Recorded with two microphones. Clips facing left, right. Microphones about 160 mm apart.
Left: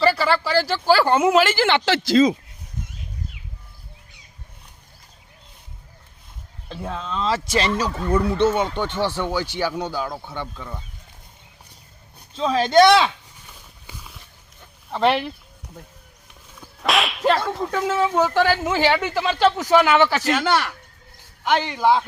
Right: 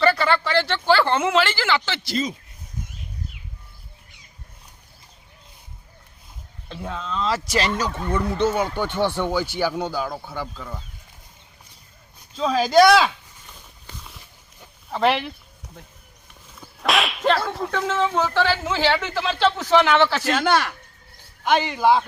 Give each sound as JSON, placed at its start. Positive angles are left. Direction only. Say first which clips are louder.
{"t": 0.0, "sound": "speech", "louder": "even", "side_deg": 5}
{"t": 1.5, "sound": "speech", "louder": "left 6 dB", "side_deg": 50}
{"t": 2.1, "sound": "speech", "louder": "left 10 dB", "side_deg": 90}
{"t": 6.7, "sound": "speech", "louder": "left 1 dB", "side_deg": 0}
{"t": 8.4, "sound": "speech", "louder": "left 2 dB", "side_deg": 25}
{"t": 8.8, "sound": "speech", "louder": "right 1 dB", "side_deg": -15}
{"t": 12.3, "sound": "speech", "louder": "even", "side_deg": 0}
{"t": 13.8, "sound": "a sound", "louder": "even", "side_deg": 5}
{"t": 14.8, "sound": "speech", "louder": "left 1 dB", "side_deg": 0}
{"t": 16.6, "sound": "whip", "louder": "even", "side_deg": 0}
{"t": 17.7, "sound": "speech", "louder": "left 2 dB", "side_deg": 10}
{"t": 20.4, "sound": "speech", "louder": "right 1 dB", "side_deg": -15}